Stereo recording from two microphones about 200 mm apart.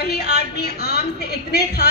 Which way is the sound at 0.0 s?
55° left (ahead or behind).